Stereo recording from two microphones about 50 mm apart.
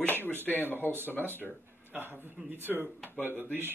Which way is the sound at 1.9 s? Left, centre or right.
Right.